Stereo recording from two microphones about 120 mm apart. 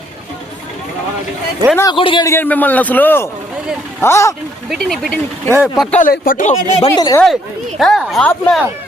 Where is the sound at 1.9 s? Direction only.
45° left (ahead or behind).